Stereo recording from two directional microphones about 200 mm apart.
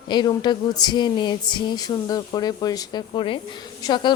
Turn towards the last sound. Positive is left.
turn(degrees=20)  # may be behind; listen again after turning